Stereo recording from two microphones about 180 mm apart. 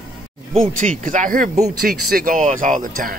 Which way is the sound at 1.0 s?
45° right (ahead or behind).